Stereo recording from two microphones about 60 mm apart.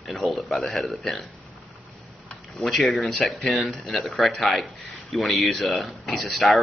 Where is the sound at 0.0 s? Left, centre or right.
Centre.